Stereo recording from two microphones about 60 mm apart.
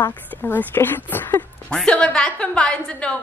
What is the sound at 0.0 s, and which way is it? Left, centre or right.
A woman's voice, left.